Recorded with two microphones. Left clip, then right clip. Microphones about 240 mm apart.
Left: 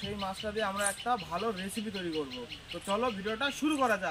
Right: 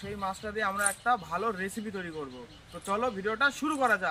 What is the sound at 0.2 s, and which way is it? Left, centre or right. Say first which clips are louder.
Speech: right 3 dB; right.